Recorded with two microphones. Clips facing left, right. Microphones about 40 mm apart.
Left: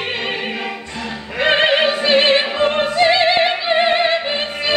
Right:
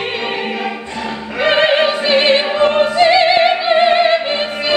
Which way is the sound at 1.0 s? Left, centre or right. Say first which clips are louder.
Right 5 dB; right.